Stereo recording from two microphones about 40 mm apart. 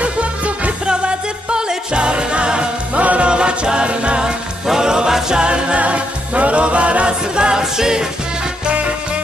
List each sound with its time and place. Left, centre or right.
0.0 s music: right
3.0 s music: right
3.3 s music: right
4.6 s music: centre
5.4 s music: right